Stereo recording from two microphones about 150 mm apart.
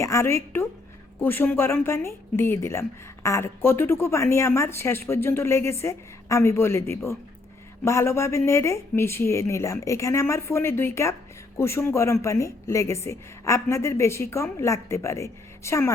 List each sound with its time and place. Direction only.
0.0 s a woman's voice: 20° left (ahead or behind)